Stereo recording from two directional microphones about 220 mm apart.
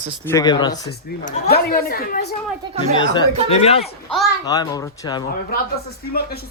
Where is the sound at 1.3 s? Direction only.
45° left (ahead or behind).